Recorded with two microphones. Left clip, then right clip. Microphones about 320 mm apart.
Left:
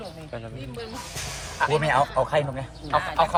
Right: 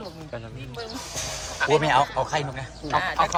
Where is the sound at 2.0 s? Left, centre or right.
Centre.